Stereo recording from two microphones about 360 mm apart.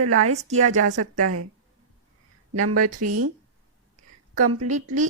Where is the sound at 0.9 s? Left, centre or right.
Right.